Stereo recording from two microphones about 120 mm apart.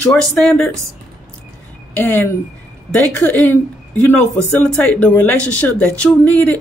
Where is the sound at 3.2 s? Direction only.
15° left (ahead or behind).